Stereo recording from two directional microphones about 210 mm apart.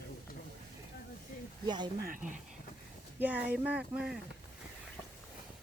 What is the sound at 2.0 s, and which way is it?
Speech, 40° right (ahead or behind).